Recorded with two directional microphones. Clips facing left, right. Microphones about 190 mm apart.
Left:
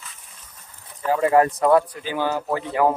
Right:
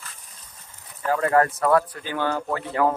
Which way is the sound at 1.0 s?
15° left (ahead or behind).